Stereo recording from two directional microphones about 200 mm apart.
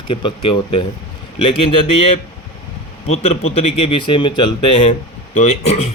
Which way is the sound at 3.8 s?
25° left (ahead or behind).